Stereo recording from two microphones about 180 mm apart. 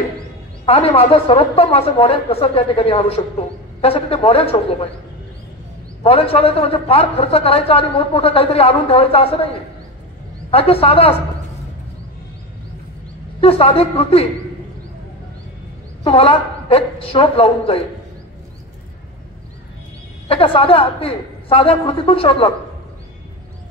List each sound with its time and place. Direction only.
0.7 s a woman's voice: 35° left (ahead or behind)
6.0 s a woman's voice: 35° left (ahead or behind)
10.5 s a woman's voice: 35° left (ahead or behind)
13.4 s a woman's voice: 35° left (ahead or behind)
16.0 s a woman's voice: 30° left (ahead or behind)
20.2 s a woman's voice: 30° left (ahead or behind)